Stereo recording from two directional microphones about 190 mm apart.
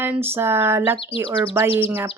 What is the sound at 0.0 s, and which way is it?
Speech, 10° right (ahead or behind).